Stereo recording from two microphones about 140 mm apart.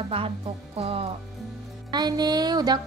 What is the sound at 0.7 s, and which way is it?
Speech, 45° right (ahead or behind).